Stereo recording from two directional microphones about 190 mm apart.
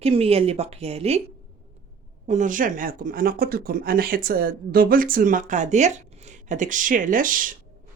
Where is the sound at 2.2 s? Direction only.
40° right (ahead or behind).